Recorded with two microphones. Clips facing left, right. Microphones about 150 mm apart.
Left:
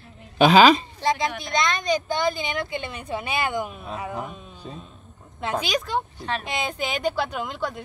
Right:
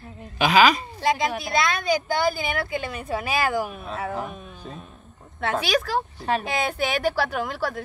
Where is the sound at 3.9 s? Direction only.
15° left (ahead or behind).